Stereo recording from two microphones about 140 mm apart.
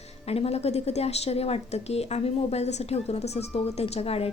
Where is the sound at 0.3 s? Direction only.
45° left (ahead or behind).